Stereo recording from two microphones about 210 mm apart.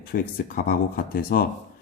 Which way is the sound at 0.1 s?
40° left (ahead or behind).